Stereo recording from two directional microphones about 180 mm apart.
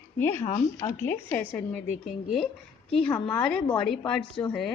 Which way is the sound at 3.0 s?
5° left (ahead or behind).